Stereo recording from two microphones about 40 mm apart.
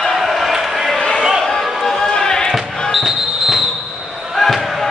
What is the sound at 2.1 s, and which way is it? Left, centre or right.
Music, centre.